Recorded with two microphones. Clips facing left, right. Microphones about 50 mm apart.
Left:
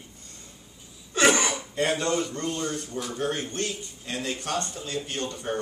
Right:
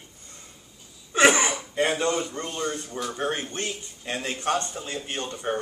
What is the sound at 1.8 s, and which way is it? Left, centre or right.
Speech, centre.